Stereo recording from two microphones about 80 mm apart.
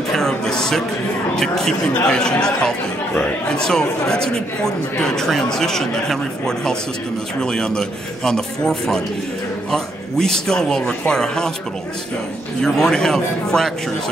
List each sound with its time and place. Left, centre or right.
0.1 s a sound: centre
1.3 s speech: centre
12.6 s speech: centre